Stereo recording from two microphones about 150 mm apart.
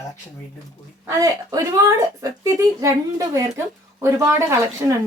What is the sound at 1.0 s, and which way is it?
Speech, 20° right (ahead or behind).